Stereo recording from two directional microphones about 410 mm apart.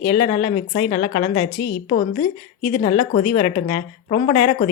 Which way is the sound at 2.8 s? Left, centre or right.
Centre.